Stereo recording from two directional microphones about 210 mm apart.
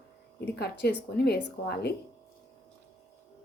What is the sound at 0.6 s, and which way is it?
Speech, 50° left (ahead or behind).